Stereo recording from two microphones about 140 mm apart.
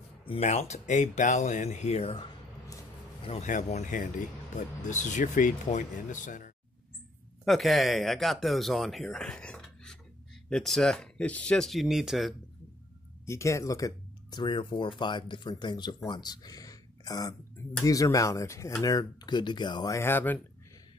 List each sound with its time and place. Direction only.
0.2 s a sound: 40° left (ahead or behind)
0.5 s speech: 55° left (ahead or behind)
3.3 s speech: 60° left (ahead or behind)
7.4 s speech: centre (ahead or behind)
13.2 s speech: 20° left (ahead or behind)
20.0 s speech: 15° left (ahead or behind)